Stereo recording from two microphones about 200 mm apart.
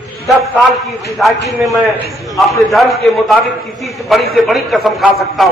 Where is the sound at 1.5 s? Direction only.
15° right (ahead or behind).